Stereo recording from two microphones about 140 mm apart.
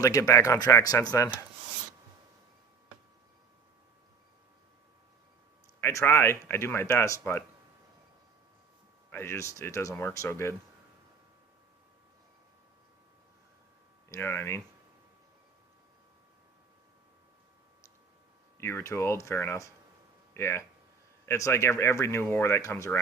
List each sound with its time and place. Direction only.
0.0 s speech: 25° left (ahead or behind)
5.8 s speech: 20° left (ahead or behind)
9.0 s speech: 15° left (ahead or behind)
14.1 s speech: 20° left (ahead or behind)
18.5 s speech: 20° left (ahead or behind)